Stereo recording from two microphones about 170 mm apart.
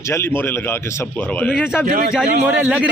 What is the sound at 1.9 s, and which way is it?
Speech, 60° right (ahead or behind).